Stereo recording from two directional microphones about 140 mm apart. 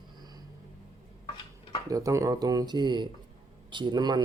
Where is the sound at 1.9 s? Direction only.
25° right (ahead or behind).